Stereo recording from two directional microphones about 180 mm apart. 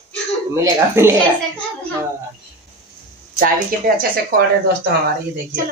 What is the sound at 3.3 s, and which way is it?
Speech, 50° right (ahead or behind).